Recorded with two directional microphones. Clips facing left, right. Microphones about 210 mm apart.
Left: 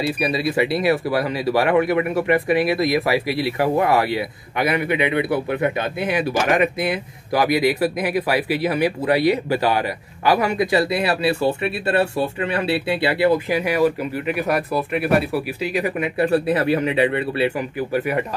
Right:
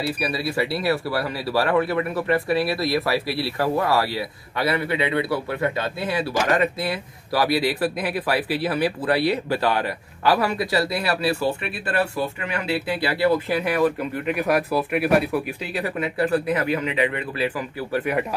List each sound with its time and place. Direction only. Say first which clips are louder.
0.0 s a man's voice: left 4 dB; 20° left (ahead or behind)
18.1 s speech: right 1 dB; 5° left (ahead or behind)